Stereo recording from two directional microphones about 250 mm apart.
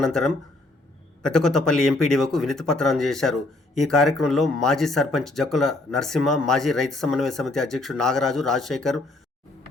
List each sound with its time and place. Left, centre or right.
0.0 s speech: centre